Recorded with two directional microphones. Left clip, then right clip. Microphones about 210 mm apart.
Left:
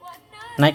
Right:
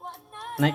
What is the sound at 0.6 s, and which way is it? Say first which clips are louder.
Speech: left 8 dB; 25° left (ahead or behind).